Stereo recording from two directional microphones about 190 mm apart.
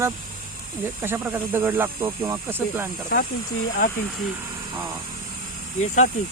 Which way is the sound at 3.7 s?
50° left (ahead or behind).